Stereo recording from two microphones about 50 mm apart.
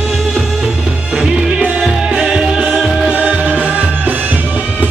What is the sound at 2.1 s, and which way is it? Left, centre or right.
Music, centre.